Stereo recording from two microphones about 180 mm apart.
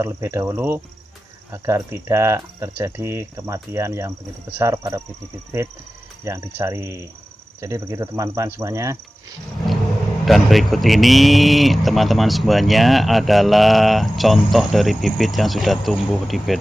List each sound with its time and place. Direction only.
0.0 s speech: 15° right (ahead or behind)
6.2 s speech: 15° right (ahead or behind)
10.2 s speech: centre (ahead or behind)